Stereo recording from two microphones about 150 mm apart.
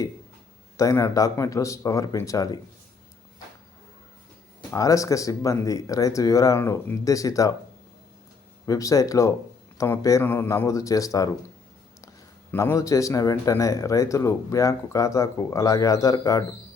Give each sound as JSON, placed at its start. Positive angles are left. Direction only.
{"t": 0.8, "sound": "speech", "side_deg": 20}
{"t": 4.7, "sound": "speech", "side_deg": 20}
{"t": 8.6, "sound": "speech", "side_deg": 20}